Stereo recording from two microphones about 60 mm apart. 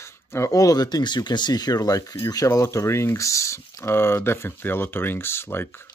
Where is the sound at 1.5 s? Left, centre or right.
Left.